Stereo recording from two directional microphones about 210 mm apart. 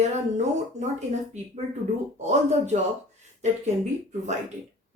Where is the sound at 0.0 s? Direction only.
35° right (ahead or behind).